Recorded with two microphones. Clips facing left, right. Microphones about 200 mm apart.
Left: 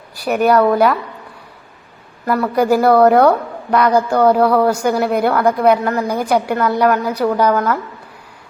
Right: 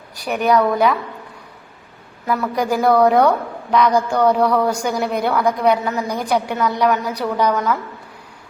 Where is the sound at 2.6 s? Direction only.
5° left (ahead or behind).